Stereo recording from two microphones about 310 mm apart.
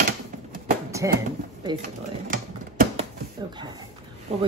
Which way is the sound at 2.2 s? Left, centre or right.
Right.